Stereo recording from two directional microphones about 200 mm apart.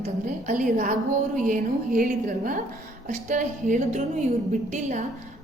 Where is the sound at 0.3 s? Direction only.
40° right (ahead or behind).